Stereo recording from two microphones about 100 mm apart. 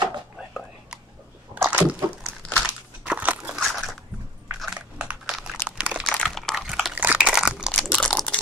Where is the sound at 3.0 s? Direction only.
15° right (ahead or behind).